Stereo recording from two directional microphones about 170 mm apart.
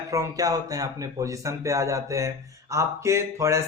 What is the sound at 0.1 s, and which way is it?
Speech, 20° right (ahead or behind).